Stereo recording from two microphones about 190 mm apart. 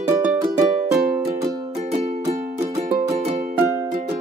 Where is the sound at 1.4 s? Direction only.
20° right (ahead or behind).